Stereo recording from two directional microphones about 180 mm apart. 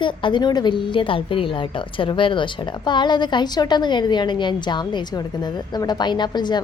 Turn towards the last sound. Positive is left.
turn(degrees=25)  # may be behind; listen again after turning